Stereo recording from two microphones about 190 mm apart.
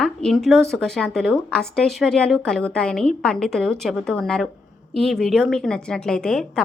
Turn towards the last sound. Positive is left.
turn(degrees=0)  # may be behind; listen again after turning